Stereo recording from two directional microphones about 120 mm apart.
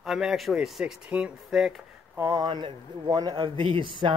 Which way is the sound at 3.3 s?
45° right (ahead or behind).